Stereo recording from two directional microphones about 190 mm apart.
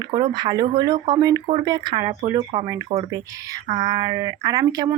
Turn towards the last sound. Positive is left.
turn(degrees=-20)  # may be behind; listen again after turning